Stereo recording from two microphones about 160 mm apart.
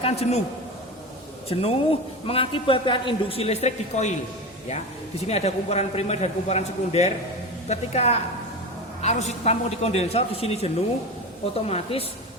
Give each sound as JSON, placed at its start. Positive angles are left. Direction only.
{"t": 0.0, "sound": "a woman's voice", "side_deg": 40}
{"t": 1.5, "sound": "a woman's voice", "side_deg": 40}
{"t": 5.2, "sound": "a woman's voice", "side_deg": 40}